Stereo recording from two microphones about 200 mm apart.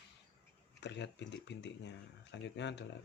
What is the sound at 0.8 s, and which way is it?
Speech, 60° left (ahead or behind).